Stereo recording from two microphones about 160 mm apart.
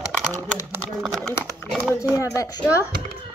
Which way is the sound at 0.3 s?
15° right (ahead or behind).